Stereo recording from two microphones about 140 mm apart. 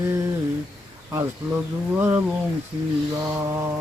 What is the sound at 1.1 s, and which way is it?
Speech, 20° right (ahead or behind).